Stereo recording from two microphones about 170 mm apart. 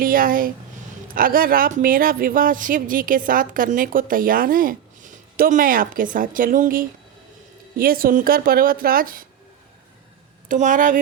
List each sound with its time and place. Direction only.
0.0 s speech: 55° right (ahead or behind)
10.5 s a woman's voice: 50° right (ahead or behind)